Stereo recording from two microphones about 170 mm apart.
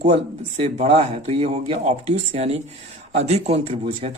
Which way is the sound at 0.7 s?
35° right (ahead or behind).